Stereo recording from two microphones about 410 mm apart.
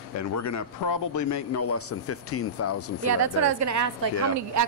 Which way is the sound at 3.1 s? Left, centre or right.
Right.